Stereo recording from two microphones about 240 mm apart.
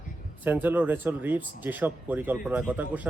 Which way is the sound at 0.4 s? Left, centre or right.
Centre.